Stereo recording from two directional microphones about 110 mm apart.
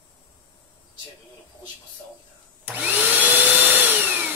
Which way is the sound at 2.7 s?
15° right (ahead or behind).